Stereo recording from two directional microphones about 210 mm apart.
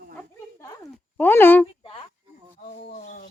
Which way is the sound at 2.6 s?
35° left (ahead or behind).